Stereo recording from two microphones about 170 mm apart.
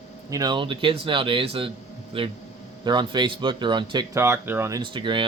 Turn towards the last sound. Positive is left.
turn(degrees=-30)  # may be behind; listen again after turning